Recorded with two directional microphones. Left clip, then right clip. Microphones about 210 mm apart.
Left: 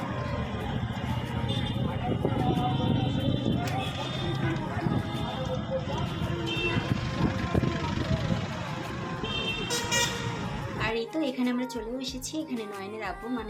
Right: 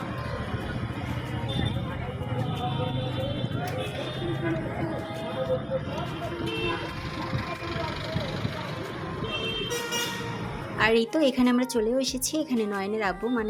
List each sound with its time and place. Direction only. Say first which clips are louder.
10.8 s a woman's voice: right 8 dB; 35° right (ahead or behind)